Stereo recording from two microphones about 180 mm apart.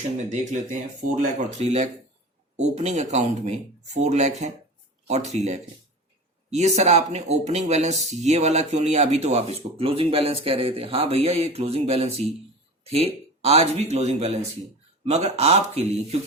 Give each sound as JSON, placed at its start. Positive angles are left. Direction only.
{"t": 0.3, "sound": "a man's voice", "side_deg": -45}